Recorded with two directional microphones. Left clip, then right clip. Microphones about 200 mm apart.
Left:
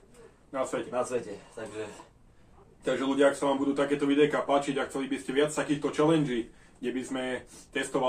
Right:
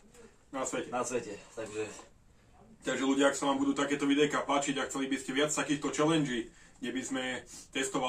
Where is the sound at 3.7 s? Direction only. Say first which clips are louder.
Left 3 dB; 10° right (ahead or behind).